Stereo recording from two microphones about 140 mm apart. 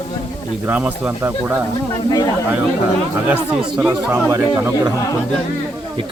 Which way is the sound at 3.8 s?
15° right (ahead or behind).